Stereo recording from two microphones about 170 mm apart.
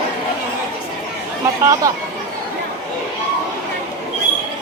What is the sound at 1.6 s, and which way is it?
Speech, 20° right (ahead or behind).